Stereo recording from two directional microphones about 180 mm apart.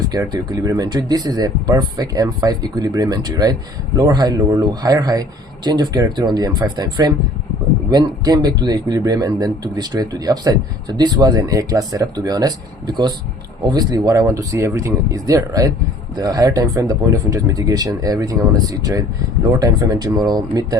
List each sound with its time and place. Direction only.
0.1 s speech: 20° right (ahead or behind)